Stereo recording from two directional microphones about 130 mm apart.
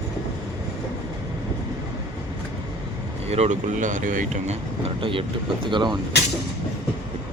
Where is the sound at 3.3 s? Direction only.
55° right (ahead or behind).